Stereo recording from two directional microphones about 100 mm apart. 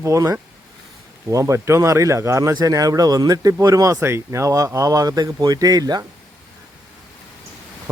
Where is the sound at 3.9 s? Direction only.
25° right (ahead or behind); by 6.0 s 40° right (ahead or behind).